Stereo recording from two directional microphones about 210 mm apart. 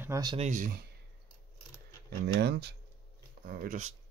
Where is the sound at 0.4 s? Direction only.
40° right (ahead or behind).